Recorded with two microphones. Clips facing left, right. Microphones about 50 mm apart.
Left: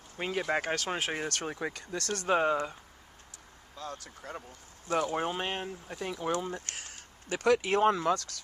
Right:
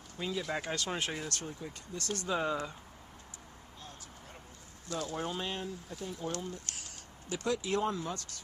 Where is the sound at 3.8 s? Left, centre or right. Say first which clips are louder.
Left 11 dB; left.